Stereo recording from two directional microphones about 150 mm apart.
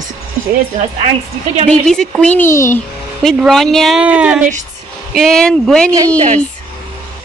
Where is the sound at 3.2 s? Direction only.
5° left (ahead or behind).